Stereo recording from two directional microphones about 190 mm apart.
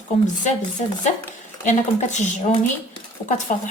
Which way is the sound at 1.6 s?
40° left (ahead or behind).